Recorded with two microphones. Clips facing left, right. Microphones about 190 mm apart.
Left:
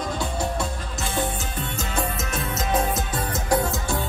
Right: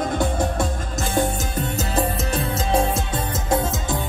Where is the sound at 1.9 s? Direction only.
35° right (ahead or behind).